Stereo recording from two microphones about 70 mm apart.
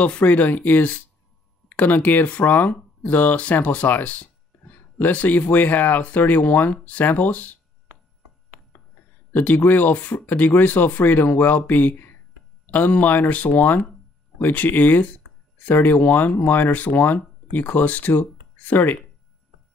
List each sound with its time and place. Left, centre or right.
0.0 s speech: centre
9.3 s speech: left